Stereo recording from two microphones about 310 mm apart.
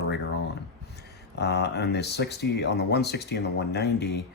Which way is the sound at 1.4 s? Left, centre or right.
Left.